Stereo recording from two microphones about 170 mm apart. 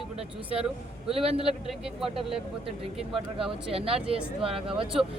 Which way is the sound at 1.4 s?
5° right (ahead or behind).